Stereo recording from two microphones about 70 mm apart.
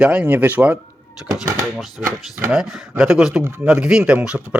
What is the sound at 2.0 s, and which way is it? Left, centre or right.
Speech, right.